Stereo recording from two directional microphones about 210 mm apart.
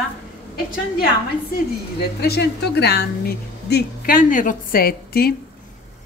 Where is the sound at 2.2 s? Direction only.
50° left (ahead or behind).